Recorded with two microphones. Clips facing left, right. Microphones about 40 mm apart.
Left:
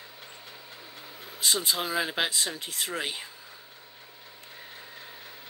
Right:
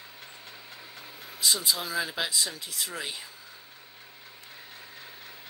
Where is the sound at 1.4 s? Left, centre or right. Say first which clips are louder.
Left 1 dB; left.